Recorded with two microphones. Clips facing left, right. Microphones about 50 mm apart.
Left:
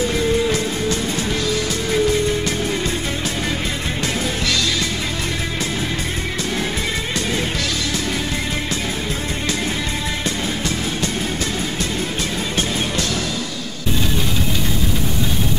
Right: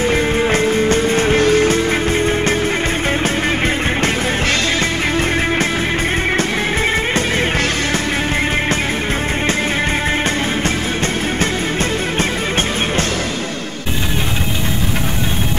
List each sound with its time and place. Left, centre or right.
0.1 s music: right